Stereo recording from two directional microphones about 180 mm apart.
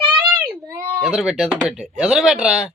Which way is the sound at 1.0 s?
Centre (ahead or behind).